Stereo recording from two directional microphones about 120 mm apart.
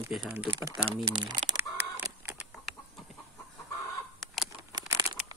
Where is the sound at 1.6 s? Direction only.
20° right (ahead or behind).